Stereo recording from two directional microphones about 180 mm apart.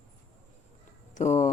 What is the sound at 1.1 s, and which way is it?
Speech, 40° left (ahead or behind).